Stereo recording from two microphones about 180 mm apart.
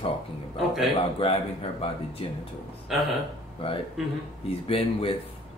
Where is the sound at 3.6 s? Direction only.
30° left (ahead or behind).